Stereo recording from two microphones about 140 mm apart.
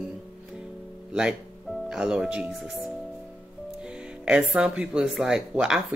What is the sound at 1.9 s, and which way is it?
Speech, 5° right (ahead or behind).